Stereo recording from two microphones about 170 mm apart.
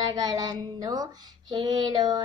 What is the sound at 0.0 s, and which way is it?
Female singing, 20° right (ahead or behind).